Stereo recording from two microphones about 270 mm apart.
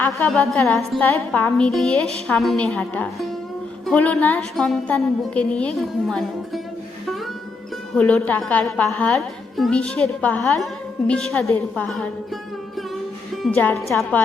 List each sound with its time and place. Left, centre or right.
0.0 s a woman's voice: centre
7.9 s a woman's voice: centre
13.4 s a woman's voice: centre